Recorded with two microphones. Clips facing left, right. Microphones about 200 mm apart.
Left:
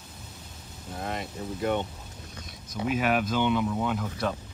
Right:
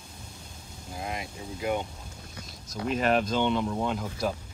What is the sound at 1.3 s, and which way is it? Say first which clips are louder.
Speech: left 2 dB; 10° right (ahead or behind).